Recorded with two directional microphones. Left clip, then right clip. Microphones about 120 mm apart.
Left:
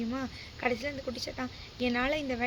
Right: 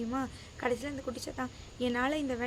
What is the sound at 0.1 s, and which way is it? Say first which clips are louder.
A woman's voice: right 1 dB; 25° right (ahead or behind).